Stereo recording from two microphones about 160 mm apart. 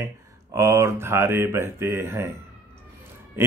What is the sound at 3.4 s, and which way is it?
Speech, 15° right (ahead or behind).